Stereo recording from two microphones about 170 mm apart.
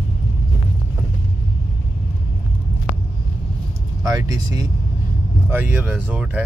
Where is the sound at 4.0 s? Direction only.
20° right (ahead or behind).